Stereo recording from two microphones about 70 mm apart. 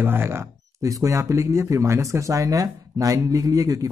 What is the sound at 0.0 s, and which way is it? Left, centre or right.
Speech, right.